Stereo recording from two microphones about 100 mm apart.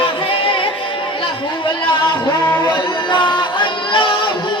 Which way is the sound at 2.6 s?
50° left (ahead or behind).